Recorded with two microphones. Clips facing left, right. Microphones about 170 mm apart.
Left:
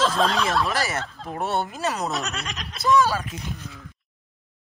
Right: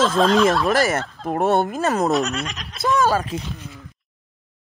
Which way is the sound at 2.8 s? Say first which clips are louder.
Right 1 dB; 45° right (ahead or behind).